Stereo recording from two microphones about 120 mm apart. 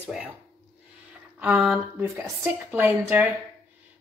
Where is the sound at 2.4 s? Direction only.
15° right (ahead or behind).